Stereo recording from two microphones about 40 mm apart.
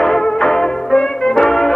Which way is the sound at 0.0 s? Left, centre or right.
Centre.